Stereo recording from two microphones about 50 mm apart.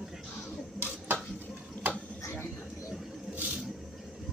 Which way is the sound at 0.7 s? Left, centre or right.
Right.